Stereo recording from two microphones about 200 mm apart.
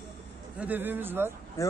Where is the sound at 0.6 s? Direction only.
10° right (ahead or behind).